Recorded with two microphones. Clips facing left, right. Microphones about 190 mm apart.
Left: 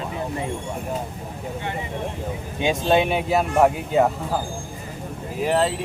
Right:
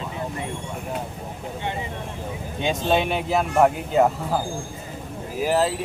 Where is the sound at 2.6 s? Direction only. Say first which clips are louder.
Left 3 dB; 5° left (ahead or behind).